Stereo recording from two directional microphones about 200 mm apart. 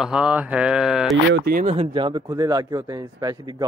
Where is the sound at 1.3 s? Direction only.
50° right (ahead or behind).